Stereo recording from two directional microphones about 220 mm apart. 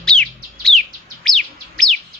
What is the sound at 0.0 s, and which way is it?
Bird, 5° left (ahead or behind).